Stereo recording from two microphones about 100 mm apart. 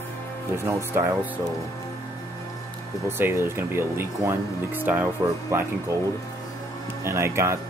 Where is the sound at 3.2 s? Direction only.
25° right (ahead or behind).